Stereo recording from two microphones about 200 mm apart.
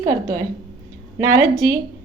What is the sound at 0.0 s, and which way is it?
A woman's voice, 15° right (ahead or behind).